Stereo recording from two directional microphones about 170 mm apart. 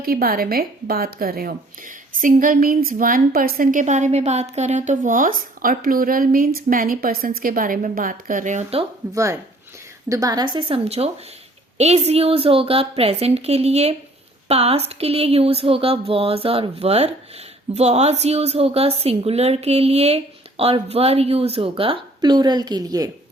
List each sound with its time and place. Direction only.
0.0 s speech: 60° right (ahead or behind); by 8.9 s 40° right (ahead or behind)
9.1 s a woman's voice: 15° right (ahead or behind)